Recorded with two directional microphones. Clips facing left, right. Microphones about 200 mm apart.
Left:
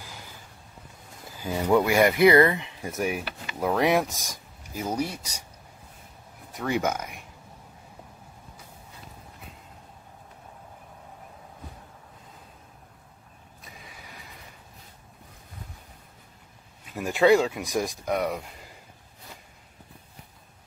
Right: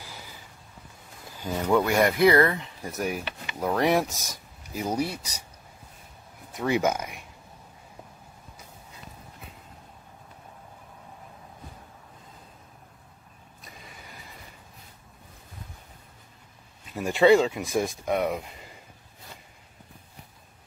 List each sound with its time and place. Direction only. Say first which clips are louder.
1.4 s speech: left 1 dB; 5° left (ahead or behind)
2.4 s speech: left 2 dB; 10° left (ahead or behind)
4.7 s speech: right 1 dB; 10° right (ahead or behind)
6.7 s speech: right 2 dB; 10° right (ahead or behind)
13.6 s vehicle: even; centre (ahead or behind)
16.9 s speech: right 1 dB; centre (ahead or behind)